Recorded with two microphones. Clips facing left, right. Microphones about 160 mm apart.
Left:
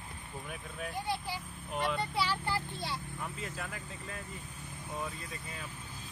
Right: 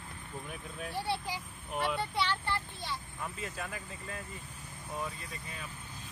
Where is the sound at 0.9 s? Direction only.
30° right (ahead or behind).